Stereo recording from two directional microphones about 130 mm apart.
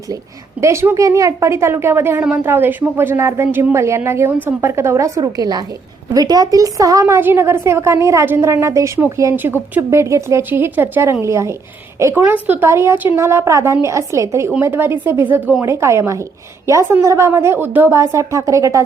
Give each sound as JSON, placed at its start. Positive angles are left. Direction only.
{"t": 0.6, "sound": "a woman's voice", "side_deg": -20}